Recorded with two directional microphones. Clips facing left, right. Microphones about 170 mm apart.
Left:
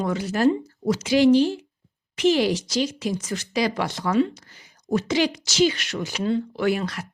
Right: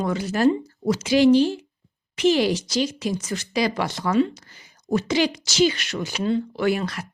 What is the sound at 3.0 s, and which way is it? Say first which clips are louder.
Speech: right 1 dB; 45° left (ahead or behind).